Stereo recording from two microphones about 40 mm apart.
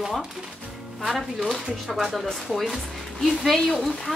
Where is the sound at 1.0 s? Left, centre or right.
Centre.